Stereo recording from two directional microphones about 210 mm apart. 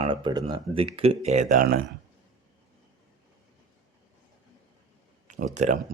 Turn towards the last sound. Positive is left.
turn(degrees=-35)  # may be behind; listen again after turning